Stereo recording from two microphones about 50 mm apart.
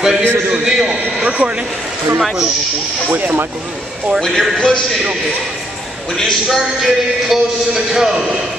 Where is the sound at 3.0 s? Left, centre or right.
Right.